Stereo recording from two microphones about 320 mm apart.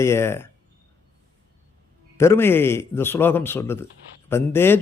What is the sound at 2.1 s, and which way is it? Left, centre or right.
A man's voice, centre.